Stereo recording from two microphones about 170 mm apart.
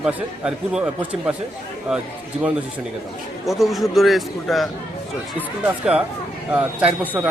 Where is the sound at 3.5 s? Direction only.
Centre (ahead or behind).